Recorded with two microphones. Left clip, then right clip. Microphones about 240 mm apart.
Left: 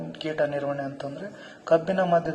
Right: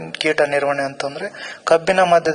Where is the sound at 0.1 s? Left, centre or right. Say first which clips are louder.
Right 10 dB; right.